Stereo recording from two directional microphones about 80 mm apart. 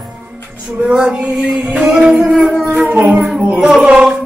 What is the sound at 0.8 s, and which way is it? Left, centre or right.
Music, centre.